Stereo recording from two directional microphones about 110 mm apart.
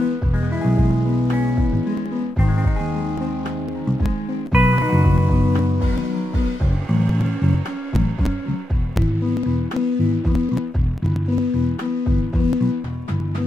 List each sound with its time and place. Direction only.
4.5 s music: 15° right (ahead or behind)